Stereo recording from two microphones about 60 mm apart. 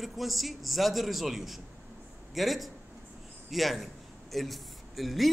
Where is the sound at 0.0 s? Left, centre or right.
Centre.